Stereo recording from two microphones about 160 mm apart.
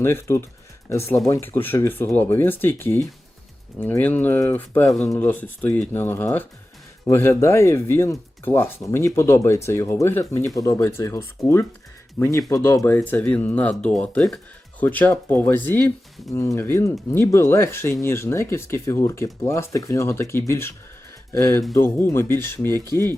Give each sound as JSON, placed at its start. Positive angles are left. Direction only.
{"t": 0.0, "sound": "speech", "side_deg": 15}